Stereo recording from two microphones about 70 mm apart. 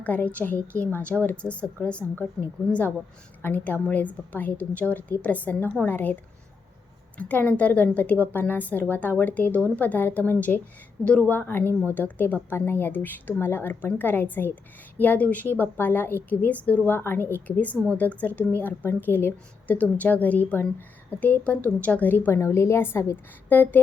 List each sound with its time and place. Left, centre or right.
0.0 s a woman's voice: left
3.4 s a woman's voice: left
7.2 s a woman's voice: left
16.8 s a woman's voice: left
17.4 s a woman's voice: left
22.4 s a woman's voice: left